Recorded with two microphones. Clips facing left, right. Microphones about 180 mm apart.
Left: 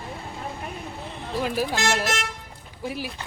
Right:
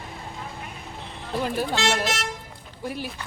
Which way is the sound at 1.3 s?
Centre (ahead or behind).